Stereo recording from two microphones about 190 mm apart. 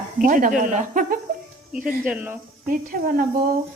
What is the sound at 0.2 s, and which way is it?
Speech, 45° right (ahead or behind).